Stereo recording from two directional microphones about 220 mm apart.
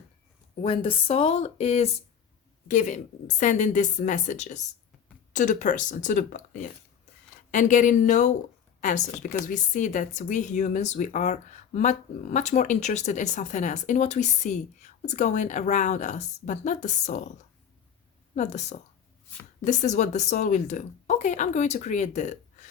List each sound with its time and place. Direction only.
0.6 s speech: 25° left (ahead or behind)
18.3 s speech: 30° left (ahead or behind)